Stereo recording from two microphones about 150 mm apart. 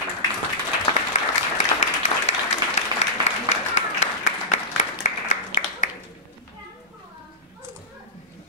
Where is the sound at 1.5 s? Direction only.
50° left (ahead or behind).